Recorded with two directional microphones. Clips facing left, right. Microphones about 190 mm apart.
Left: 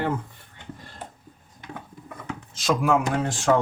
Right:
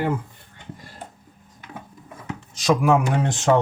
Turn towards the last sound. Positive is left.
turn(degrees=-20)  # may be behind; listen again after turning